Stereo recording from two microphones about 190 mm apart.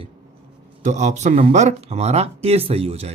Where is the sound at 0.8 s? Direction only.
40° right (ahead or behind).